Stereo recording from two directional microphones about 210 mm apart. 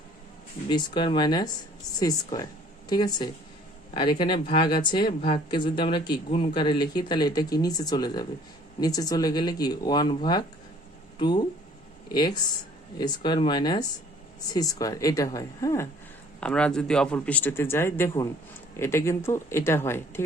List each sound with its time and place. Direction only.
0.7 s speech: 20° left (ahead or behind)